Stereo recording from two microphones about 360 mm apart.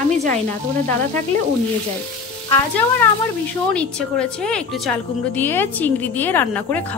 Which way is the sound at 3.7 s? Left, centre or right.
Centre.